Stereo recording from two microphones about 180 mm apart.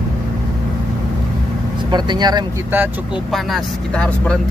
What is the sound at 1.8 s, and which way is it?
Speech, 25° right (ahead or behind).